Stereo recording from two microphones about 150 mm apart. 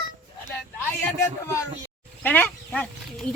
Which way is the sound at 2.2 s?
10° left (ahead or behind).